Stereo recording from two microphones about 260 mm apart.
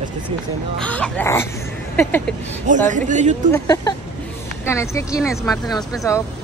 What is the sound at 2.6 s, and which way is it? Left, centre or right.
Speech, right.